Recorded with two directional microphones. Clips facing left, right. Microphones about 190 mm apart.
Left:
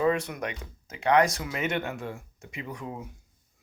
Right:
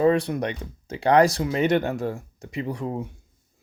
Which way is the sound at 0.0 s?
35° right (ahead or behind).